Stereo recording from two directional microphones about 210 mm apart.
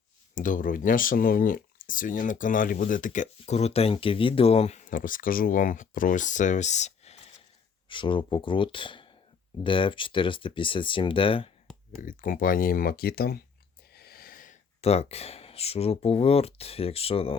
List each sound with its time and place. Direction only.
0.3 s speech: 40° left (ahead or behind)
12.0 s speech: 40° left (ahead or behind)